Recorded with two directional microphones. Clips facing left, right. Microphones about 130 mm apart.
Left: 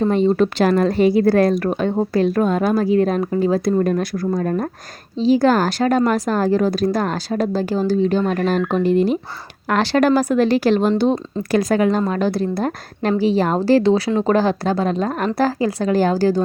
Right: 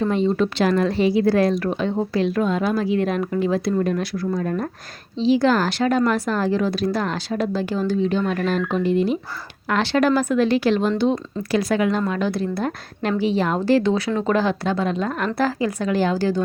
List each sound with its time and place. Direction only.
0.0 s a woman's voice: 40° left (ahead or behind)